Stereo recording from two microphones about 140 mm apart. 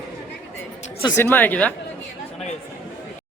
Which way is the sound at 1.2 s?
15° left (ahead or behind).